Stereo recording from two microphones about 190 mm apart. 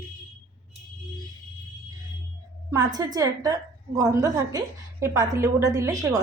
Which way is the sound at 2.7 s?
20° right (ahead or behind).